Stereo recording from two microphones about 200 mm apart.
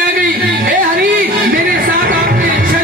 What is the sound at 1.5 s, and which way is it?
Music, 45° right (ahead or behind).